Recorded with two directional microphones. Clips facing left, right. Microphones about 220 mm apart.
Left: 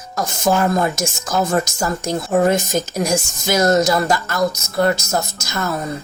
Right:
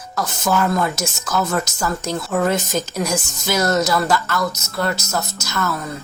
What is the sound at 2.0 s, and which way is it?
Speech, 15° left (ahead or behind).